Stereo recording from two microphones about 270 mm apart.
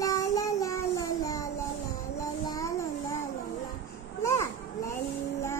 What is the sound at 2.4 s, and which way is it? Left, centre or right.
Music, centre.